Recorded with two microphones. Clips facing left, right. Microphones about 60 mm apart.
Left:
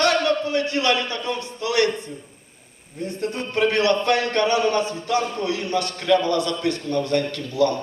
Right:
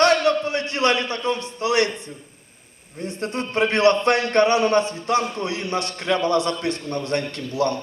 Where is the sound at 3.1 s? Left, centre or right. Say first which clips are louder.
Even; right.